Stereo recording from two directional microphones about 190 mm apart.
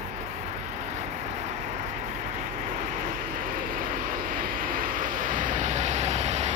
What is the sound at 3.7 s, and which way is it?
Vehicle, 45° right (ahead or behind).